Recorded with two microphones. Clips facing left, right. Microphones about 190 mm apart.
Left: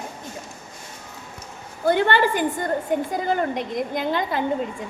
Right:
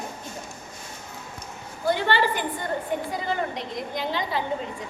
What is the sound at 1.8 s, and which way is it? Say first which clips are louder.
A woman's voice: left 4 dB; 55° left (ahead or behind).